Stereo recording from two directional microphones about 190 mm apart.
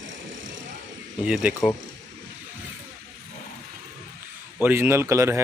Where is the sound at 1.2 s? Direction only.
5° right (ahead or behind).